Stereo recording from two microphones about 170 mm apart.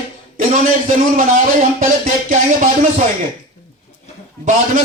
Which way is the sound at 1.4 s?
50° right (ahead or behind).